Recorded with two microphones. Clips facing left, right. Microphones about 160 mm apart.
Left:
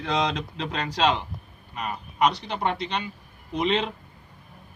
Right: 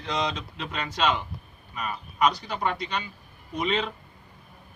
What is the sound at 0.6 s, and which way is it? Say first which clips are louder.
Speech: left 3 dB; 35° left (ahead or behind).